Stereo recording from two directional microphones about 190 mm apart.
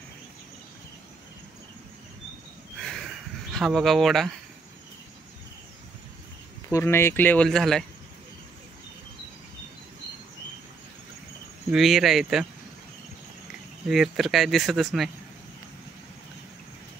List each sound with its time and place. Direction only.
2.8 s a sound: centre (ahead or behind)
3.5 s speech: centre (ahead or behind)
6.7 s speech: 10° left (ahead or behind)
11.7 s speech: centre (ahead or behind)
13.8 s speech: centre (ahead or behind)